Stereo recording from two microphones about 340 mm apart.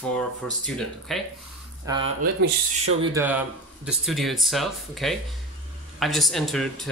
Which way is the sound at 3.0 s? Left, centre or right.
Centre.